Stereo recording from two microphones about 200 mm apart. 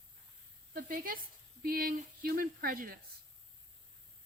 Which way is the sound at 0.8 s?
45° right (ahead or behind).